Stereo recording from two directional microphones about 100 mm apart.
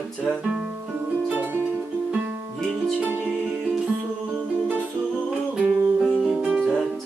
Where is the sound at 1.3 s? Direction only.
20° right (ahead or behind).